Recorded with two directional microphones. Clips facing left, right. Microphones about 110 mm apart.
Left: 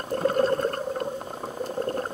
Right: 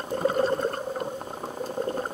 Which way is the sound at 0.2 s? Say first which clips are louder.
Left 1 dB; 15° right (ahead or behind).